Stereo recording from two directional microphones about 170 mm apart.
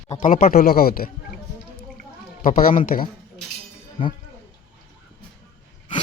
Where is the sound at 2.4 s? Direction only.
55° left (ahead or behind).